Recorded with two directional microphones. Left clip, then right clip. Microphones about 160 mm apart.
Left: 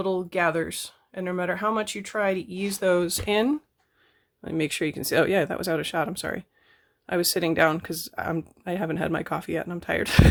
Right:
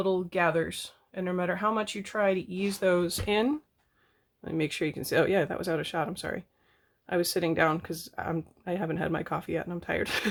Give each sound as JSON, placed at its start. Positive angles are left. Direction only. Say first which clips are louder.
{"t": 0.0, "sound": "speech", "louder": "left 2 dB", "side_deg": 30}